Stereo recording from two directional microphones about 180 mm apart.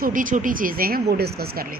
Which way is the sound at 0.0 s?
50° right (ahead or behind).